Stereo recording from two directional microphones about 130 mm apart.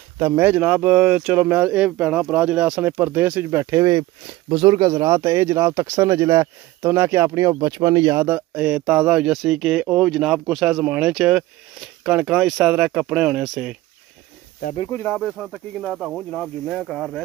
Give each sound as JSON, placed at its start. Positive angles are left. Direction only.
{"t": 0.4, "sound": "speech", "side_deg": -10}
{"t": 8.2, "sound": "speech", "side_deg": -10}
{"t": 15.0, "sound": "speech", "side_deg": 0}